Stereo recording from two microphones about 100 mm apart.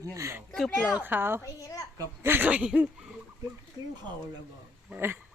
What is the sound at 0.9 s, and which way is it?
Speech, 20° right (ahead or behind).